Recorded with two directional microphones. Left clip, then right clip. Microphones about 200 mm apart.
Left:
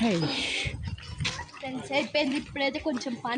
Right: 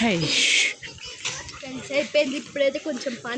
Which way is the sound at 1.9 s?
55° left (ahead or behind).